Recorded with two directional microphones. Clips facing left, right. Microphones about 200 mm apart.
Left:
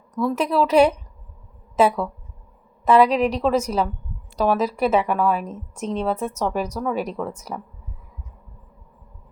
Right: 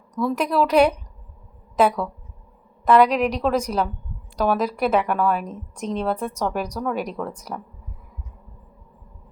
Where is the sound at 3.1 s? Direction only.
30° left (ahead or behind).